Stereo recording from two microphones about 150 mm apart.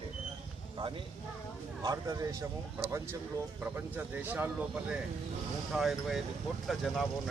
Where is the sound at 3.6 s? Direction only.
15° right (ahead or behind).